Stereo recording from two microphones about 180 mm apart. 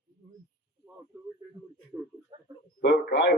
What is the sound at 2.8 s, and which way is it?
Speech, 75° left (ahead or behind).